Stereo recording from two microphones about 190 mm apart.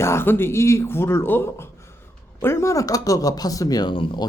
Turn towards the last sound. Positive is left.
turn(degrees=25)  # may be behind; listen again after turning